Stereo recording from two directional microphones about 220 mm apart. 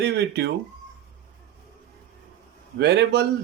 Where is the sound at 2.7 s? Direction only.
50° right (ahead or behind).